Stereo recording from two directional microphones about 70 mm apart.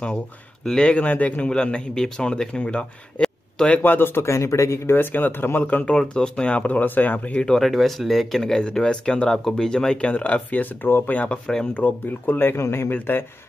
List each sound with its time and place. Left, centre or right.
0.7 s speech: centre
3.2 s a sound: centre
3.7 s speech: left
4.9 s speech: left
5.9 s speech: centre
7.4 s speech: centre; by 11.1 s left
11.1 s speech: centre
11.8 s speech: left
12.6 s speech: left
12.9 s speech: left